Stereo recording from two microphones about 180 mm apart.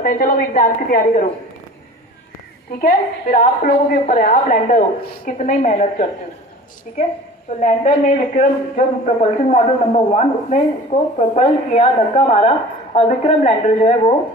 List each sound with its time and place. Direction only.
0.0 s a woman's voice: 55° left (ahead or behind)
2.8 s a woman's voice: 45° left (ahead or behind)
7.6 s a man's voice: 40° left (ahead or behind)